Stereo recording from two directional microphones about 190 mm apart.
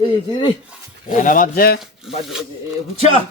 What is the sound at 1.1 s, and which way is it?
Speech, 45° left (ahead or behind).